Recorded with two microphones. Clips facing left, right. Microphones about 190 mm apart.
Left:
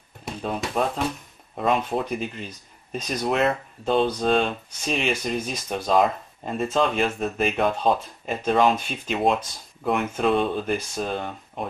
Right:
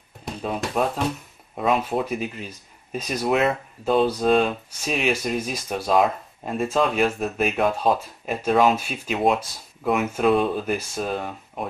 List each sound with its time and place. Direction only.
0.2 s speech: centre (ahead or behind)